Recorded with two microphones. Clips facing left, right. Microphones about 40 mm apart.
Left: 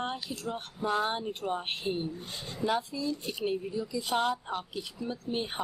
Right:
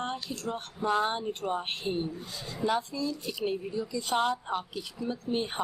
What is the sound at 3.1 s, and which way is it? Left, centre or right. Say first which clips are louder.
Speech: even; left.